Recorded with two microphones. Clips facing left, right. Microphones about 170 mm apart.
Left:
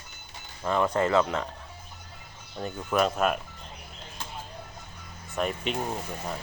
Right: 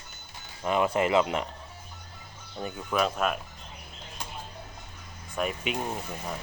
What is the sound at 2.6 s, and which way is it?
Speech, 5° right (ahead or behind).